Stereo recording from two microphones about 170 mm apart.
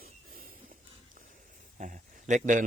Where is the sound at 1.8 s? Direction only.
50° right (ahead or behind).